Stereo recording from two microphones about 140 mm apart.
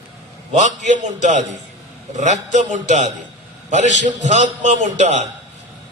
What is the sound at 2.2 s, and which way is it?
A man's voice, 60° right (ahead or behind).